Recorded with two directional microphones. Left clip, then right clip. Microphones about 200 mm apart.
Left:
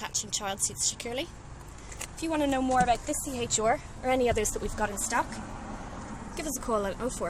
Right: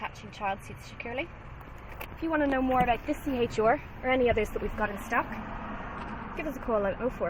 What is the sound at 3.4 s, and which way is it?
Speech, 20° right (ahead or behind).